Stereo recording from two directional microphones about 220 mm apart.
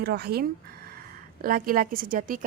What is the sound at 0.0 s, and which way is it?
Speech, 45° right (ahead or behind).